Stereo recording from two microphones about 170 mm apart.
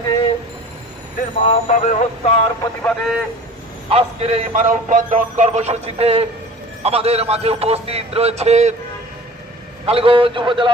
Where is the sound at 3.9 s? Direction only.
35° right (ahead or behind).